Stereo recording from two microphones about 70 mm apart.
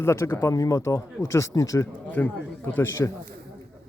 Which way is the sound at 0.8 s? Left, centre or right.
Left.